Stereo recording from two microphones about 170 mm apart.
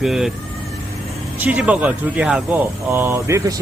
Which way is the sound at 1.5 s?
10° right (ahead or behind).